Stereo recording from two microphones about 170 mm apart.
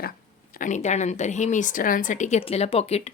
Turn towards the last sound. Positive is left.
turn(degrees=40)  # may be behind; listen again after turning